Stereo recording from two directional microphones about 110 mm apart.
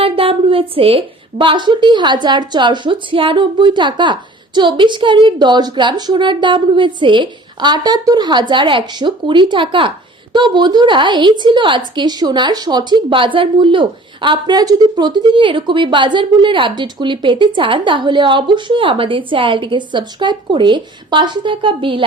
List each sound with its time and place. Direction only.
0.0 s a woman's voice: 55° right (ahead or behind)